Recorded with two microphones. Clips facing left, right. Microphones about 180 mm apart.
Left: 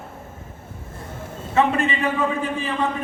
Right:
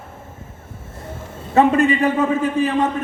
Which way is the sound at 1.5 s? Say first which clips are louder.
Right 6 dB; 40° right (ahead or behind).